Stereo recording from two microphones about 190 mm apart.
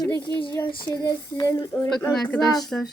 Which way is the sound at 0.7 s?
25° left (ahead or behind).